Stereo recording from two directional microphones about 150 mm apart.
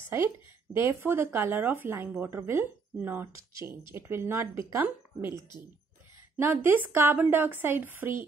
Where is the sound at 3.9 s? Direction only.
15° right (ahead or behind).